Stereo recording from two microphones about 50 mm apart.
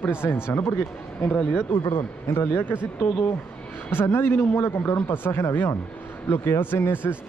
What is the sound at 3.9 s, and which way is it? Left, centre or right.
A man's voice, left.